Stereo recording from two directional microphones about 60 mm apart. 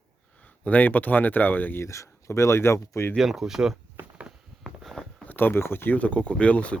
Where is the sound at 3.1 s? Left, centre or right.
Centre.